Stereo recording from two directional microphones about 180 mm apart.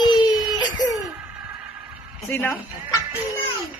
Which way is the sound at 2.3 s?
10° left (ahead or behind).